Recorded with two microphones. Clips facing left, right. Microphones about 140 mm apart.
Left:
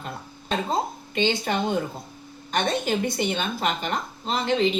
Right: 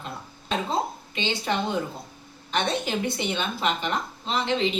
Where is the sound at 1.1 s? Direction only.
50° left (ahead or behind).